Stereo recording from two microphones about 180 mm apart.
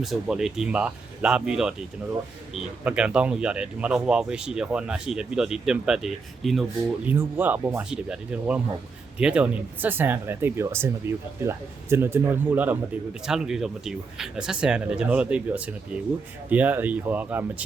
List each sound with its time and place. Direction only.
0.0 s speech: centre (ahead or behind)
2.8 s speech: 5° right (ahead or behind)